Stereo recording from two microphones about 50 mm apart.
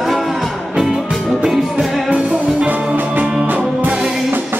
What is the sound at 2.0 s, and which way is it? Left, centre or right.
Music, right.